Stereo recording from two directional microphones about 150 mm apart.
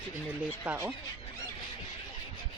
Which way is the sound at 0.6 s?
10° right (ahead or behind).